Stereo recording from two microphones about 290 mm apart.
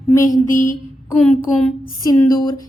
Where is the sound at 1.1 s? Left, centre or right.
Centre.